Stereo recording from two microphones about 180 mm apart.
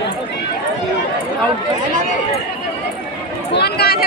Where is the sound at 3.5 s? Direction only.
65° left (ahead or behind).